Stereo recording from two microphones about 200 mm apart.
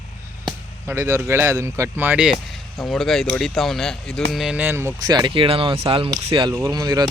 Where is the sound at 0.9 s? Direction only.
15° right (ahead or behind).